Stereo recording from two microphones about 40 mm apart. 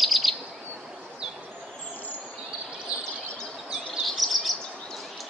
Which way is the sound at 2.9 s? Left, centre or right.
Right.